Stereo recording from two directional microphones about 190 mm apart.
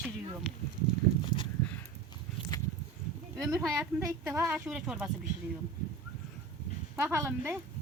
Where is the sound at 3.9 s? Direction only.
10° right (ahead or behind).